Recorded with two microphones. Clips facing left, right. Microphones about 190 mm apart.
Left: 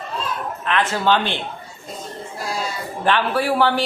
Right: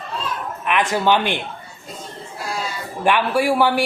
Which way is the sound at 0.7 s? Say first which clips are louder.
Right 1 dB; 15° right (ahead or behind).